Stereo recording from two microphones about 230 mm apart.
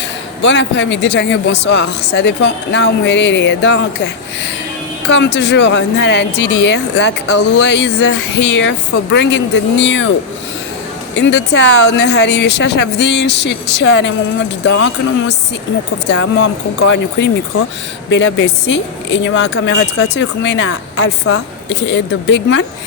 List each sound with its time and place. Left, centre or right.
0.4 s speech: left
11.2 s speech: left
16.0 s speech: left